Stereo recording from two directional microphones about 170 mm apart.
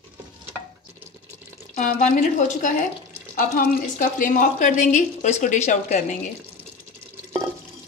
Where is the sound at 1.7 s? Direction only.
50° left (ahead or behind).